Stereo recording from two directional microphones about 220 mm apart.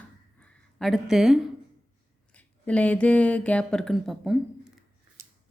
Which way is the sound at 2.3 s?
5° left (ahead or behind).